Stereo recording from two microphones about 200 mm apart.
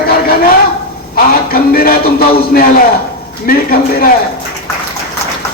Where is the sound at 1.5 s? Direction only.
50° left (ahead or behind).